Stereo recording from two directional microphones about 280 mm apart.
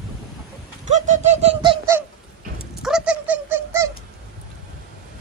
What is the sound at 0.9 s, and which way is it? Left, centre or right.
Bird, right.